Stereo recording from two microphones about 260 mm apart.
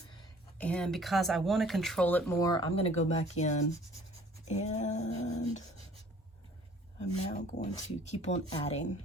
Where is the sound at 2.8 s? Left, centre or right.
Left.